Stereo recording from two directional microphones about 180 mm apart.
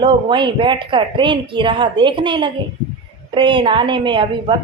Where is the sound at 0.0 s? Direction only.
25° right (ahead or behind).